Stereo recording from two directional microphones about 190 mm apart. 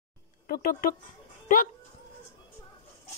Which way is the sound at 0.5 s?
50° left (ahead or behind).